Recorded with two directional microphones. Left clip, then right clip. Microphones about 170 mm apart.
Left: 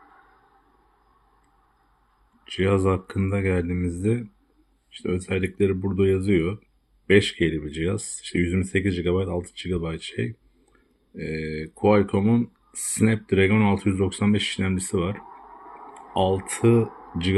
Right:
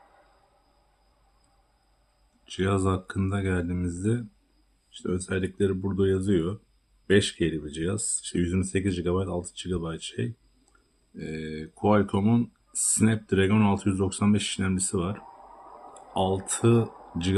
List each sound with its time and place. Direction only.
2.5 s speech: 15° left (ahead or behind)
11.2 s speech: 10° left (ahead or behind)